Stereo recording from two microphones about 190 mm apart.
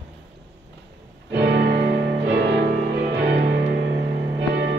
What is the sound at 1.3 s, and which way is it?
Music, 60° right (ahead or behind).